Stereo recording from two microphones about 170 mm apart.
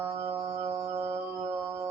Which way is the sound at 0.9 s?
30° right (ahead or behind).